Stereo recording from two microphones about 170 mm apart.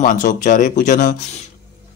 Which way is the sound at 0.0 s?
50° left (ahead or behind).